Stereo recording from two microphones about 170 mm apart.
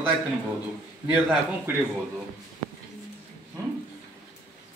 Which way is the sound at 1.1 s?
5° right (ahead or behind).